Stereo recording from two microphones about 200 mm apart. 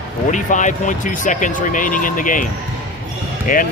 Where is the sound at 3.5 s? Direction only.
45° left (ahead or behind).